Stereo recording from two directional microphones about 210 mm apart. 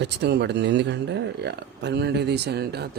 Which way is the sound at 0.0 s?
50° right (ahead or behind).